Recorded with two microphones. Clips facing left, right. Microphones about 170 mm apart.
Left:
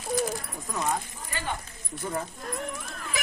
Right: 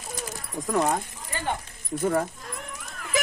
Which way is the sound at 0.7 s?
60° right (ahead or behind).